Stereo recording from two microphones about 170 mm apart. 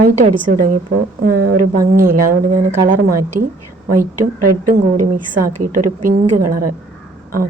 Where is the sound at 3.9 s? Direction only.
50° right (ahead or behind).